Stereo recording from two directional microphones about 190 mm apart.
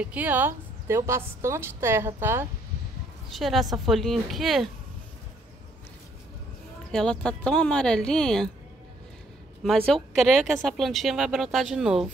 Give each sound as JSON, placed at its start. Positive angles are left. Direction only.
{"t": 0.0, "sound": "a woman's voice", "side_deg": -10}
{"t": 3.3, "sound": "a woman's voice", "side_deg": 0}
{"t": 6.9, "sound": "a woman's voice", "side_deg": 5}
{"t": 9.6, "sound": "a woman's voice", "side_deg": 0}